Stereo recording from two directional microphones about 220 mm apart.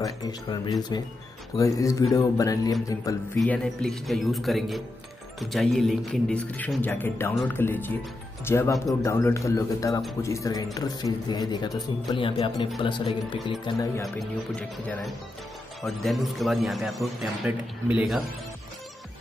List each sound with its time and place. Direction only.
0.0 s a man's voice: 15° left (ahead or behind)
3.3 s a man's voice: centre (ahead or behind)
14.0 s a man's voice: 5° left (ahead or behind)